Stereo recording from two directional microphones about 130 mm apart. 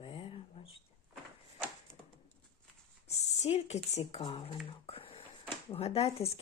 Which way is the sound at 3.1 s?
55° left (ahead or behind).